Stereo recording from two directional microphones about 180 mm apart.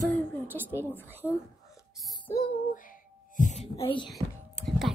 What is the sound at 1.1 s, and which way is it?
Speech, 10° right (ahead or behind).